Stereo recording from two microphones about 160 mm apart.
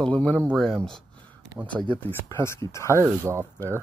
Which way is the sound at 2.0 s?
15° left (ahead or behind).